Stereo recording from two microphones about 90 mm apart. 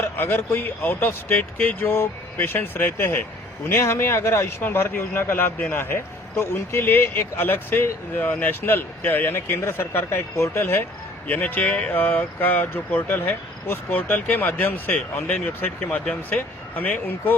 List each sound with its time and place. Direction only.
0.2 s a man's voice: 25° left (ahead or behind)